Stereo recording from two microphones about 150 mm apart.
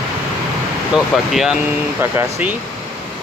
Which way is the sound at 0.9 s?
5° right (ahead or behind).